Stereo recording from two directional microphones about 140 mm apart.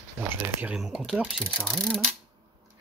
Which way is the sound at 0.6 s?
10° right (ahead or behind).